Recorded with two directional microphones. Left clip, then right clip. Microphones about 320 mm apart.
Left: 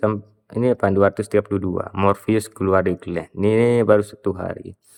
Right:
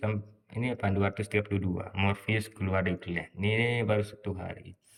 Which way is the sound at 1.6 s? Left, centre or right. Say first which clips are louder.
Left 12 dB; left.